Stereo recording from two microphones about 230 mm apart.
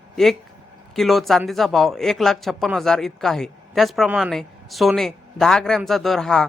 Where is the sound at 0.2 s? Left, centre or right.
Centre.